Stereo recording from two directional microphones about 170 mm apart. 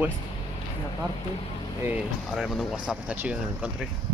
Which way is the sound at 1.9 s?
5° right (ahead or behind).